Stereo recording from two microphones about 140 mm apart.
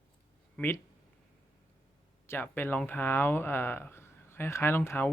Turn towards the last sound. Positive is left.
turn(degrees=15)  # may be behind; listen again after turning